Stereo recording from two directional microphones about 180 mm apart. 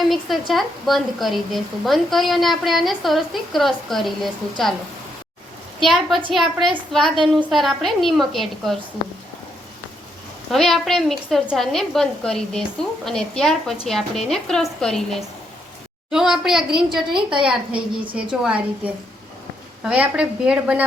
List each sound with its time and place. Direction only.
0.1 s a woman's voice: centre (ahead or behind)
5.8 s a woman's voice: centre (ahead or behind)
10.5 s a woman's voice: centre (ahead or behind)
19.8 s a woman's voice: 5° right (ahead or behind)